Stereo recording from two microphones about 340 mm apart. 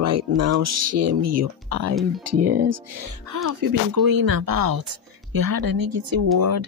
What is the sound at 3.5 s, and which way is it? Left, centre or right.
Speech, right.